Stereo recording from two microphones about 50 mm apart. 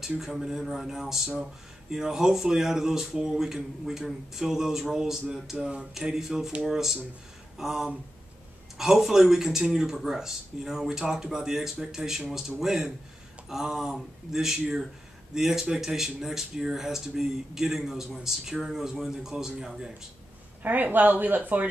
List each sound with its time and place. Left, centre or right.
0.2 s speech: centre
20.6 s speech: right